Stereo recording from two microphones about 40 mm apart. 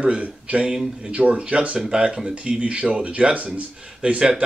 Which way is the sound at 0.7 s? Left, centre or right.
Centre.